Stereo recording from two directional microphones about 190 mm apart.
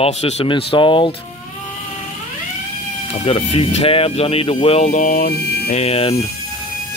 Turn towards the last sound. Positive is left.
turn(degrees=30)  # may be behind; listen again after turning